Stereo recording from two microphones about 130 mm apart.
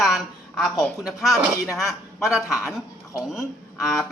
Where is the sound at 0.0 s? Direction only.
Centre (ahead or behind).